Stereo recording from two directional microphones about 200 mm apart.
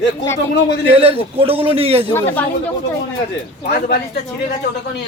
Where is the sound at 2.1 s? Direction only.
10° left (ahead or behind).